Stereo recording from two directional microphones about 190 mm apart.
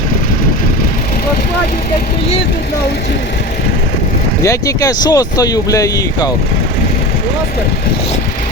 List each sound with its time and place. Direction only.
4.4 s speech: 20° left (ahead or behind)